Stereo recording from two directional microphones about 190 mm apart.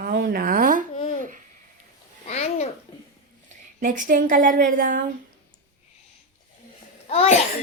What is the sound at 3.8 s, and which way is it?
A woman's voice, 45° right (ahead or behind).